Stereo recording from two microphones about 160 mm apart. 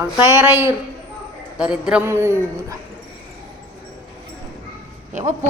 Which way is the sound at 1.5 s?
5° right (ahead or behind).